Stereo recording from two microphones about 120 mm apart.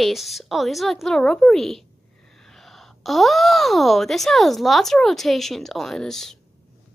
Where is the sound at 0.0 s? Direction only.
Centre (ahead or behind).